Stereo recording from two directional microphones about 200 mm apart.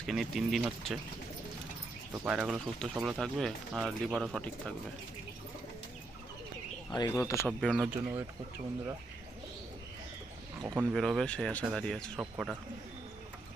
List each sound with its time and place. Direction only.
0.0 s speech: centre (ahead or behind)
2.1 s speech: 5° right (ahead or behind)
6.9 s speech: 15° left (ahead or behind)
7.4 s speech: centre (ahead or behind)
10.6 s speech: 20° right (ahead or behind)
10.9 s speech: centre (ahead or behind)